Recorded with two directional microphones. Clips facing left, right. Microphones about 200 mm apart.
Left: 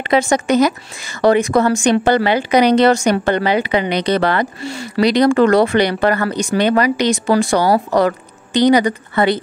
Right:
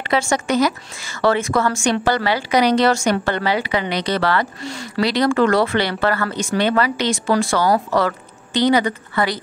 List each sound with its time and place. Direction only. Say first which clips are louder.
0.0 s a woman's voice: left 5 dB; 20° left (ahead or behind)
4.6 s speech: left 4 dB; 5° left (ahead or behind)
5.0 s speech: left 5 dB; 20° left (ahead or behind)